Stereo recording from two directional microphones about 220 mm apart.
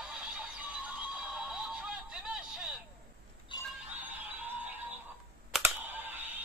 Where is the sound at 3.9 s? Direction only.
10° right (ahead or behind).